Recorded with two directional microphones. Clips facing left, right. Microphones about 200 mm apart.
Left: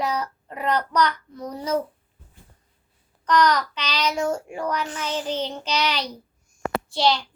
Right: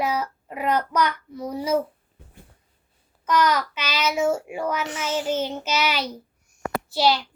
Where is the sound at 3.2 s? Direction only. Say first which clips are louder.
Left 1 dB; 5° right (ahead or behind).